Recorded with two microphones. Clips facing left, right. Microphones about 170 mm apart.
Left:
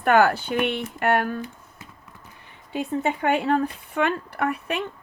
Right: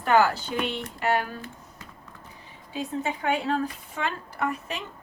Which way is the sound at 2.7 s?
60° left (ahead or behind).